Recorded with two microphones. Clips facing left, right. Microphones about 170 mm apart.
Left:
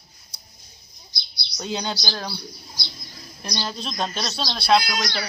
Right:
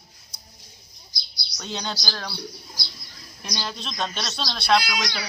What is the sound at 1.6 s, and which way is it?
Speech, 5° left (ahead or behind).